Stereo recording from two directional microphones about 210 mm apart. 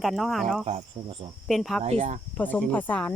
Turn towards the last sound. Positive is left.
turn(degrees=5)  # may be behind; listen again after turning